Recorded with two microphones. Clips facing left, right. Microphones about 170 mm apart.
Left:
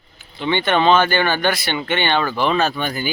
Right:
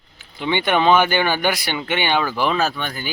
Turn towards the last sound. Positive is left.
turn(degrees=5)  # may be behind; listen again after turning